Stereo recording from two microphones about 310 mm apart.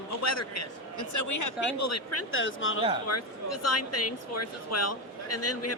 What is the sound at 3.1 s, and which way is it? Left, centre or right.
Speech, left.